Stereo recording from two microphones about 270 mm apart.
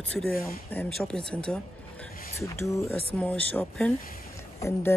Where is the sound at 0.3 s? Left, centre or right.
Left.